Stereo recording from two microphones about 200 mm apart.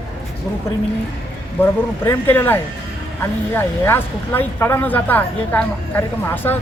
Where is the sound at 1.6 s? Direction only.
10° left (ahead or behind).